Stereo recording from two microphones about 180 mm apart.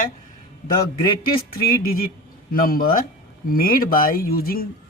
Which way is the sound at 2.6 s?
55° left (ahead or behind).